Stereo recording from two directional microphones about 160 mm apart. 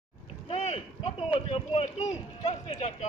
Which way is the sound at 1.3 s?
35° left (ahead or behind).